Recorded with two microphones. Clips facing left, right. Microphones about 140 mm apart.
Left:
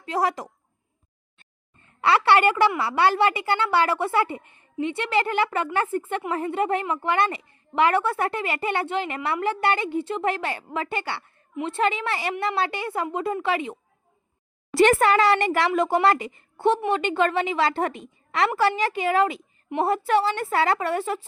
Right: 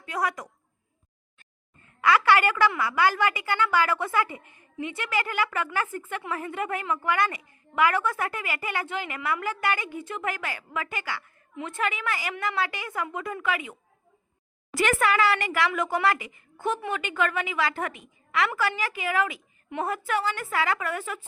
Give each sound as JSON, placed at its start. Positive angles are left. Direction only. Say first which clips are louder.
{"t": 0.0, "sound": "a woman's voice", "louder": "left 5 dB", "side_deg": 30}
{"t": 14.8, "sound": "speech", "louder": "left 6 dB", "side_deg": 35}